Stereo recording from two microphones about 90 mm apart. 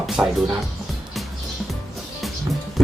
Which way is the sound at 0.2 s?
10° right (ahead or behind).